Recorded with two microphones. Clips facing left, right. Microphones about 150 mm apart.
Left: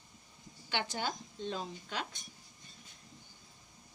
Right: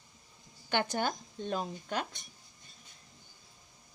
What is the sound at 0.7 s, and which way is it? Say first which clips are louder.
A woman's voice: right 5 dB; 50° right (ahead or behind).